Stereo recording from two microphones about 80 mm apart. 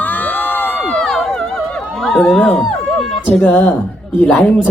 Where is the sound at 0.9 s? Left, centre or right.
Centre.